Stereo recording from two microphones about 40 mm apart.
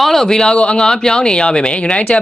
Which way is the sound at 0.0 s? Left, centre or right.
Centre.